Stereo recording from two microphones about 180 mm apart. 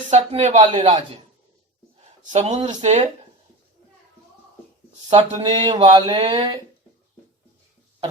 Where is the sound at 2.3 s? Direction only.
40° right (ahead or behind).